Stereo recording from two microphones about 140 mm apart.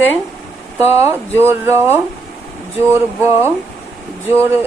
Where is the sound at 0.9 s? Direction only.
20° right (ahead or behind).